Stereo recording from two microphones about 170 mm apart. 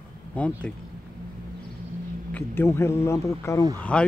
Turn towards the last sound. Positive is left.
turn(degrees=5)  # may be behind; listen again after turning